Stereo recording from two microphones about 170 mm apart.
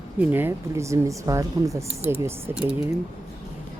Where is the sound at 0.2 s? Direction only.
10° right (ahead or behind).